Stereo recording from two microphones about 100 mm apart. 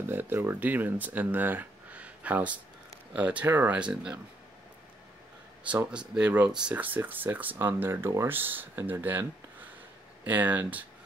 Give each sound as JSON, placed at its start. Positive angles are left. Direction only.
{"t": 0.1, "sound": "speech", "side_deg": -20}
{"t": 5.9, "sound": "speech", "side_deg": -10}